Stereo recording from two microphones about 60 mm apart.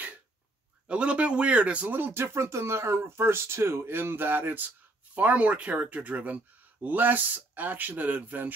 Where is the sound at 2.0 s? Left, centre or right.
Right.